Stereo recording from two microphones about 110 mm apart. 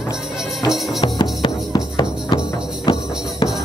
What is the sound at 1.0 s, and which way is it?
Music, 45° left (ahead or behind).